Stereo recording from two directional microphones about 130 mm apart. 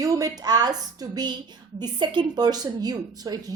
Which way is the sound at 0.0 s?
25° right (ahead or behind).